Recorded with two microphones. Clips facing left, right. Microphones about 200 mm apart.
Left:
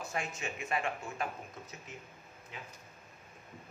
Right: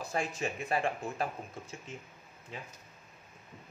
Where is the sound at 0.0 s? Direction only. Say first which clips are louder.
Right 4 dB; 35° right (ahead or behind).